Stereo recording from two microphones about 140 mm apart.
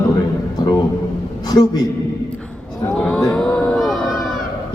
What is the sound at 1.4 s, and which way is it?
Speech, 30° left (ahead or behind).